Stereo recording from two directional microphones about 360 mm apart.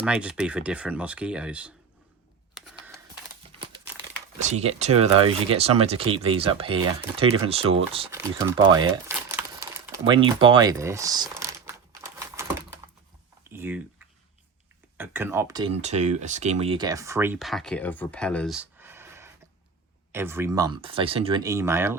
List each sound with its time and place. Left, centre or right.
0.0 s speech: centre
2.6 s camera: centre
3.4 s crumpling: centre
4.4 s speech: centre
13.5 s typing: centre
14.9 s speech: centre